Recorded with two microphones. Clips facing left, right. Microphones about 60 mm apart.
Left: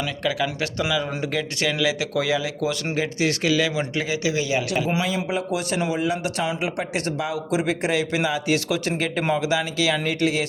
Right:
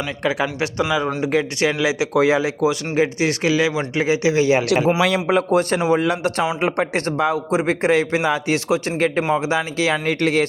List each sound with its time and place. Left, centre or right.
0.2 s speech: right
4.9 s a man's voice: right